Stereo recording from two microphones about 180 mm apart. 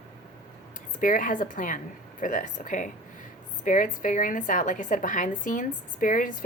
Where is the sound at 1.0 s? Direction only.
45° left (ahead or behind).